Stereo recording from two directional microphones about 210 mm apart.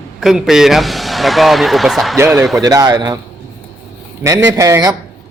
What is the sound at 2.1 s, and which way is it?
A man's voice, 10° right (ahead or behind).